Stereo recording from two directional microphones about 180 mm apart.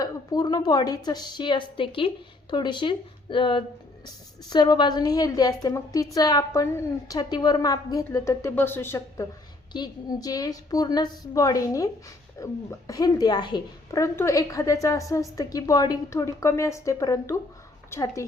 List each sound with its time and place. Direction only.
0.0 s a woman's voice: 20° left (ahead or behind)